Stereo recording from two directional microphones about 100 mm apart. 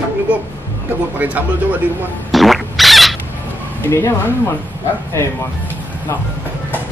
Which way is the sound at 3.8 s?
20° left (ahead or behind).